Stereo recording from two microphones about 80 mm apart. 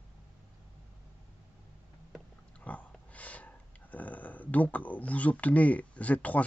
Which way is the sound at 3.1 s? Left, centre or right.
Centre.